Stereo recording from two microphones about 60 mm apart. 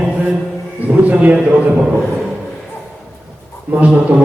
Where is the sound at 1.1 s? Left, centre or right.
Right.